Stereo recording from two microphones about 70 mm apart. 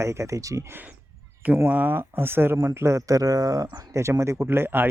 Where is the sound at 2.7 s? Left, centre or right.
Right.